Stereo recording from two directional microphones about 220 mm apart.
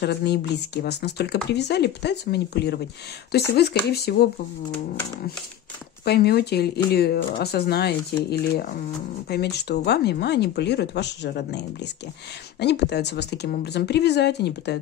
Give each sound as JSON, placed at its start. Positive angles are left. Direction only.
{"t": 0.0, "sound": "speech", "side_deg": 50}
{"t": 6.0, "sound": "speech", "side_deg": 45}